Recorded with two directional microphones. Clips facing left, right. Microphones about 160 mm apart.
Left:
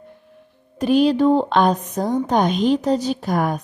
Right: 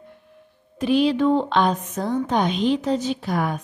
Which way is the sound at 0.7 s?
45° left (ahead or behind).